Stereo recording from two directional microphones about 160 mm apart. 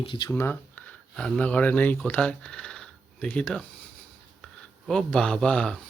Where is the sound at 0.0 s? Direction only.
30° left (ahead or behind).